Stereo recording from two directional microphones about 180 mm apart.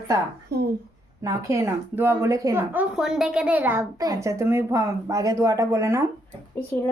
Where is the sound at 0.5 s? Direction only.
65° right (ahead or behind).